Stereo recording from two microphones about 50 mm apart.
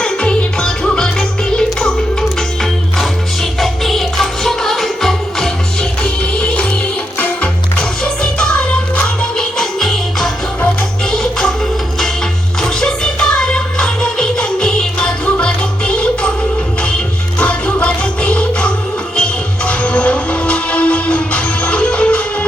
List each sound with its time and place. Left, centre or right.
0.0 s music: centre
3.6 s music: centre
6.0 s music: left
9.6 s music: centre
12.6 s music: centre
17.4 s music: left